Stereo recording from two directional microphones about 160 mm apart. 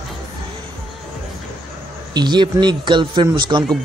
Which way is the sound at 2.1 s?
30° right (ahead or behind).